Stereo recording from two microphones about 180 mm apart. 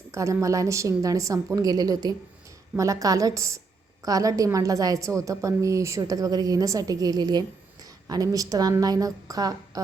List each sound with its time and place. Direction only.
0.1 s a woman's voice: 15° right (ahead or behind)